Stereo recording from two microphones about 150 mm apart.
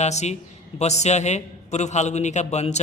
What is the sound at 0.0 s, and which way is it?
A man's voice, 50° left (ahead or behind).